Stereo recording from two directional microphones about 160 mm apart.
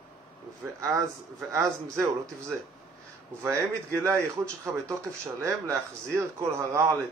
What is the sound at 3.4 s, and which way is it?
Speech, 20° right (ahead or behind).